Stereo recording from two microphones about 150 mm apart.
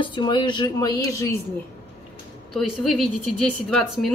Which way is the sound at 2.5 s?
Centre (ahead or behind).